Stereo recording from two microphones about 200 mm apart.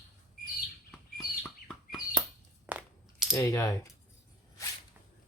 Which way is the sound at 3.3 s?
15° left (ahead or behind).